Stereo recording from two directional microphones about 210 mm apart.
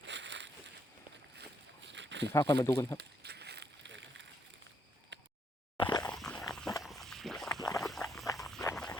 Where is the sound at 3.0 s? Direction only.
50° right (ahead or behind).